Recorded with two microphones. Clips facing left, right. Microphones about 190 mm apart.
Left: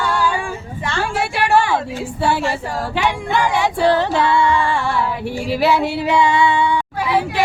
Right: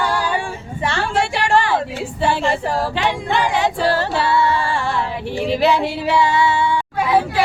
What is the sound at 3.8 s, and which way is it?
Child singing, 15° left (ahead or behind).